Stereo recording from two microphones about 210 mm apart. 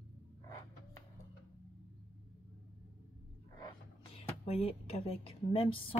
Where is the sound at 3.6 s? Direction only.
25° left (ahead or behind).